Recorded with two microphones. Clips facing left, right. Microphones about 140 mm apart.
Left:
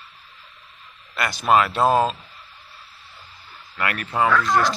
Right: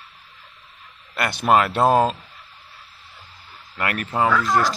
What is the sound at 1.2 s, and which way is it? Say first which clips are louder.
Speech: right 1 dB; 55° right (ahead or behind).